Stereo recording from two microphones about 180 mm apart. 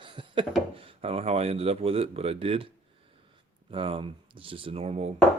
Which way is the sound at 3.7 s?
30° right (ahead or behind).